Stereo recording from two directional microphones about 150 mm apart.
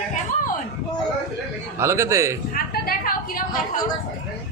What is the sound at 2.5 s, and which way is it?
Speech, 75° left (ahead or behind).